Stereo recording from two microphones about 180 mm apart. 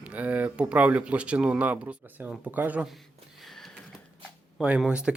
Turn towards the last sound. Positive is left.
turn(degrees=-5)  # may be behind; listen again after turning